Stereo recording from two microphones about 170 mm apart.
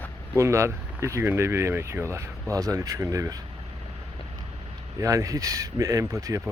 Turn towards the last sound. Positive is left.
turn(degrees=-20)  # may be behind; listen again after turning